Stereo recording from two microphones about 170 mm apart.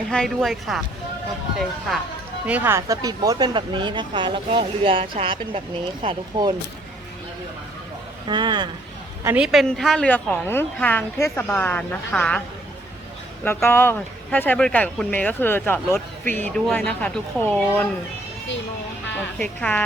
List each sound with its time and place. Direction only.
0.1 s speech: centre (ahead or behind)
2.5 s speech: 10° right (ahead or behind); by 6.5 s 30° right (ahead or behind)
8.3 s speech: 25° right (ahead or behind)
9.2 s speech: 5° right (ahead or behind)
13.4 s speech: 15° left (ahead or behind)
19.4 s speech: 10° left (ahead or behind)